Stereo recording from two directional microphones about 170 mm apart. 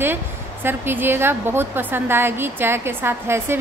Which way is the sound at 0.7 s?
10° right (ahead or behind).